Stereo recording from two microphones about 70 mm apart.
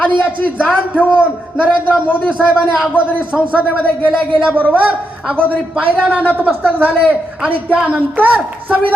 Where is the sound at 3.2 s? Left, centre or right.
Centre.